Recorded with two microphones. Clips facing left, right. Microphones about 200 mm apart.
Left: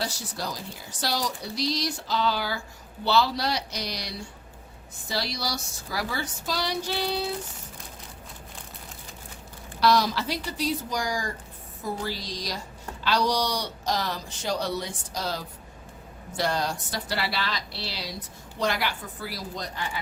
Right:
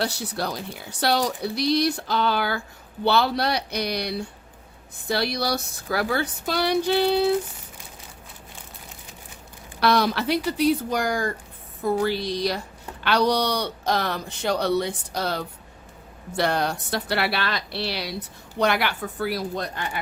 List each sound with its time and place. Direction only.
0.0 s a woman's voice: 65° right (ahead or behind)
9.8 s a woman's voice: 60° right (ahead or behind)